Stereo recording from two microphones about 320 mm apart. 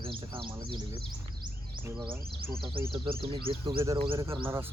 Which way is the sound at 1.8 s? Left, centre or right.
Centre.